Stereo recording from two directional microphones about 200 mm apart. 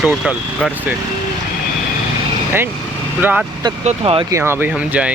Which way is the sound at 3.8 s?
25° right (ahead or behind).